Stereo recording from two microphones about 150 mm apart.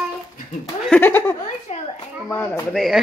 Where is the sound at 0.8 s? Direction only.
10° left (ahead or behind).